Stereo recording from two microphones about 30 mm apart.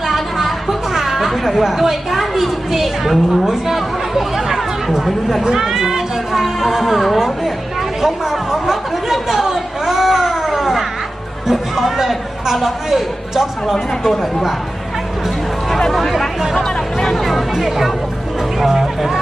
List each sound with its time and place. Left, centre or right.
0.1 s chatter: centre
2.1 s a woman's voice: centre
4.9 s speech: centre
5.5 s speech: centre
8.0 s chatter: centre
9.3 s a sound: centre
12.9 s speech: centre
16.6 s speech: centre
17.2 s speech: centre